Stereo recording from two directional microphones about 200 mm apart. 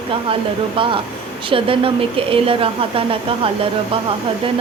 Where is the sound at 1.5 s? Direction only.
25° right (ahead or behind).